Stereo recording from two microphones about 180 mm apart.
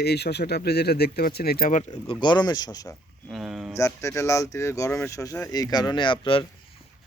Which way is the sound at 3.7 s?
15° left (ahead or behind).